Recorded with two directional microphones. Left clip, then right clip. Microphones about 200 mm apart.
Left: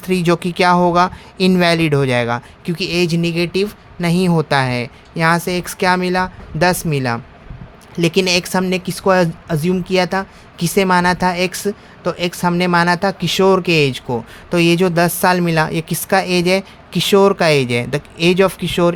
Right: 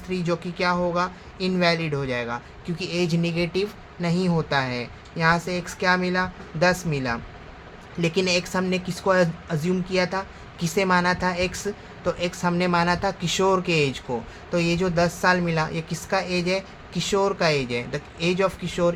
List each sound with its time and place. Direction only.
0.1 s speech: 55° left (ahead or behind)